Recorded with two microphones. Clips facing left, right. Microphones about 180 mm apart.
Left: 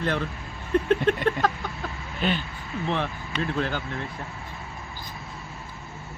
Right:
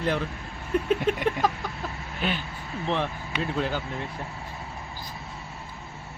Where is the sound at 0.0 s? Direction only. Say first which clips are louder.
Even; 10° right (ahead or behind).